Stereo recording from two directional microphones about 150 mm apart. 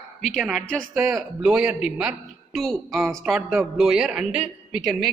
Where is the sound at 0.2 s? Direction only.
Centre (ahead or behind).